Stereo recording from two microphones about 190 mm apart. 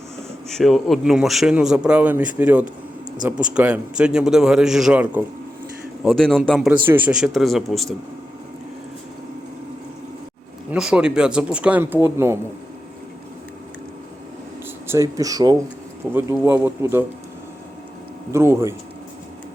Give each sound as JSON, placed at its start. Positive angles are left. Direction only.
{"t": 0.4, "sound": "speech", "side_deg": 0}
{"t": 10.7, "sound": "speech", "side_deg": -5}
{"t": 14.8, "sound": "speech", "side_deg": -15}
{"t": 18.3, "sound": "speech", "side_deg": -15}